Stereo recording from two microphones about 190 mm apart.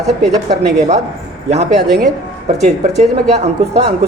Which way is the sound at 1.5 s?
60° right (ahead or behind).